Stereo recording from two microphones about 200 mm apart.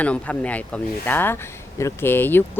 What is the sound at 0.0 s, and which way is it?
Speech, 5° left (ahead or behind).